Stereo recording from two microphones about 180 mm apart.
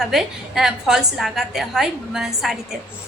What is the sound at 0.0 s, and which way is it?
A woman's voice, centre (ahead or behind).